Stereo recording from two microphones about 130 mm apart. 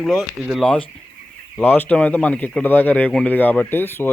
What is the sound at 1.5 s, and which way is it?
A man's voice, 15° left (ahead or behind).